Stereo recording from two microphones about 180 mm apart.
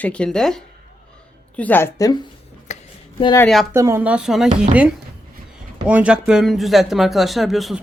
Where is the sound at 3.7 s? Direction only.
15° right (ahead or behind).